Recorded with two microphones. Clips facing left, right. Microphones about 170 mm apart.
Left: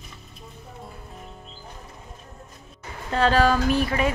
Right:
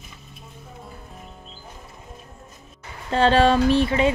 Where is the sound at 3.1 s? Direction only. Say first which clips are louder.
Right 3 dB; 30° right (ahead or behind).